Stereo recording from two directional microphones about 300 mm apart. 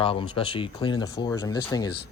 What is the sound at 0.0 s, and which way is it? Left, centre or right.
Speech, centre.